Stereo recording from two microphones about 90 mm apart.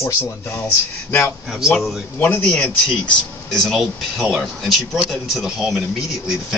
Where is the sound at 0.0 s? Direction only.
30° left (ahead or behind).